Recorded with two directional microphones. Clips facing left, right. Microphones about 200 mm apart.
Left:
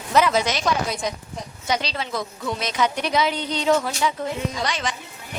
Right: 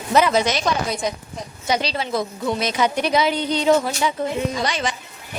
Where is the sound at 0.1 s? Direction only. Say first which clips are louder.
Right 2 dB; centre (ahead or behind).